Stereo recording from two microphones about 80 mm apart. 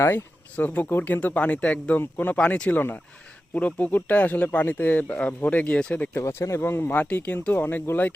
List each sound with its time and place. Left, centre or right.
0.5 s speech: centre
6.1 s speech: left